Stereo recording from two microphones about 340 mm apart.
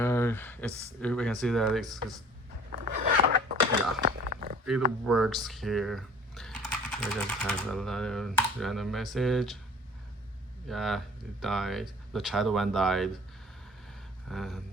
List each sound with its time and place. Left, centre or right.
0.0 s a sound: centre
1.0 s speech: centre
2.7 s zipper: right
4.0 s a sound: right
5.0 s speech: centre
10.7 s speech: centre
14.3 s speech: centre